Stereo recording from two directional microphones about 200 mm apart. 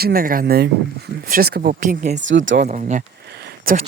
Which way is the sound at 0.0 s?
45° right (ahead or behind).